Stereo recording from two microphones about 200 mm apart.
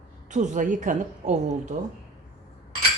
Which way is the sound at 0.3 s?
35° right (ahead or behind).